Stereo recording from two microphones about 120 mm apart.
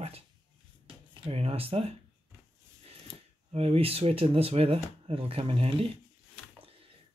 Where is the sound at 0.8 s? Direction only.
50° right (ahead or behind).